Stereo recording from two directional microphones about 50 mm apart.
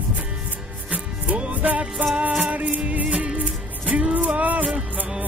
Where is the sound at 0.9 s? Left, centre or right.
Right.